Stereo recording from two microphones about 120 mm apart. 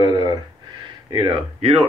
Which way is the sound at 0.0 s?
35° right (ahead or behind).